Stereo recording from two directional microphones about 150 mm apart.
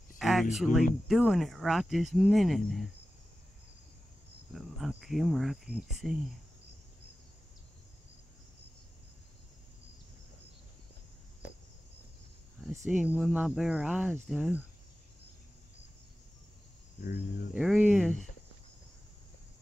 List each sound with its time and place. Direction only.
0.2 s speech: centre (ahead or behind)
4.6 s speech: centre (ahead or behind)
12.8 s speech: 5° right (ahead or behind)
17.0 s speech: 65° left (ahead or behind)
17.6 s speech: 5° right (ahead or behind)